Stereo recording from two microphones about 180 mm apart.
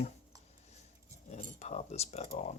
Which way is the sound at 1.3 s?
40° left (ahead or behind).